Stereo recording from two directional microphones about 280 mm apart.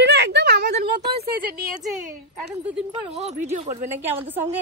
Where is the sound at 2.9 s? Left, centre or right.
Right.